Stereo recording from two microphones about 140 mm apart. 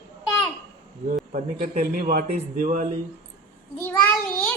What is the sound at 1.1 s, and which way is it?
Speech, 65° right (ahead or behind).